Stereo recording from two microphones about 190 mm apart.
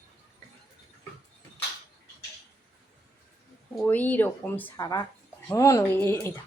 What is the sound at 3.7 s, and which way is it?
Speech, 5° left (ahead or behind).